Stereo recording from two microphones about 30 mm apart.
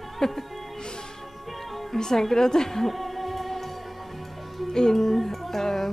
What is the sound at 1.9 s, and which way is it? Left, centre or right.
Speech, centre.